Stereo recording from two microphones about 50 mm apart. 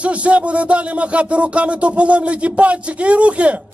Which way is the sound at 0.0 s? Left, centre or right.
Right.